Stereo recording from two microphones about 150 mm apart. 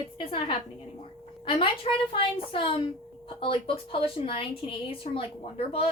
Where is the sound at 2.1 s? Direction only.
35° left (ahead or behind).